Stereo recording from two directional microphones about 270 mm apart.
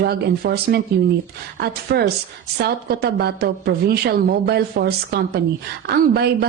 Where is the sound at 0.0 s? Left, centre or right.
Right.